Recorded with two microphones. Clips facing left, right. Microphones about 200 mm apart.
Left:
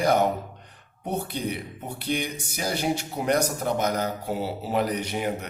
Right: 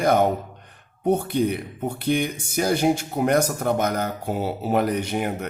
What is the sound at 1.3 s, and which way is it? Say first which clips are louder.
Speech: right 8 dB; 50° right (ahead or behind).